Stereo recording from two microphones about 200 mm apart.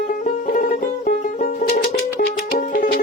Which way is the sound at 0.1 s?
40° left (ahead or behind).